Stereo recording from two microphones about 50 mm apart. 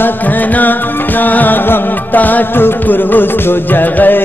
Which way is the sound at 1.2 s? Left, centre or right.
Left.